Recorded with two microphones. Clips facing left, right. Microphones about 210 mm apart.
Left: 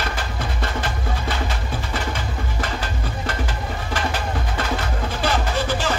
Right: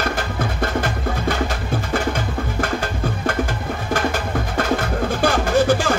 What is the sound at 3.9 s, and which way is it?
Music, 50° right (ahead or behind).